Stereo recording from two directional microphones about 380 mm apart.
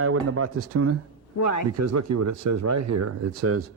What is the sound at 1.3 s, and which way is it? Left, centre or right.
Speech, left.